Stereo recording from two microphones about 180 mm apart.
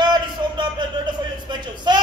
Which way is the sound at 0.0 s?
25° right (ahead or behind).